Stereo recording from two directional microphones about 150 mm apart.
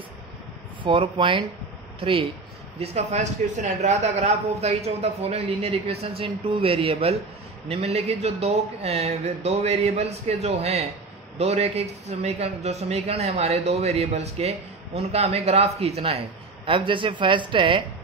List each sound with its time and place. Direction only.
0.8 s a man's voice: 35° right (ahead or behind)